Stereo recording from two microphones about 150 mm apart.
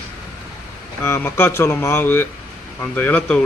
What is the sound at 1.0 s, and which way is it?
Speech, 15° left (ahead or behind).